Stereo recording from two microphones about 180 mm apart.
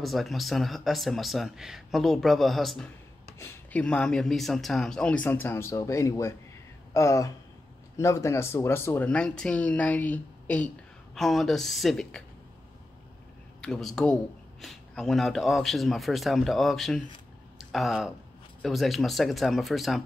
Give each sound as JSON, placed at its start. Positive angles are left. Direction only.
{"t": 0.0, "sound": "speech", "side_deg": 0}
{"t": 13.6, "sound": "speech", "side_deg": 0}